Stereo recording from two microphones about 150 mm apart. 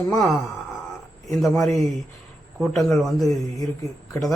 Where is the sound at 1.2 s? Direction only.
Centre (ahead or behind).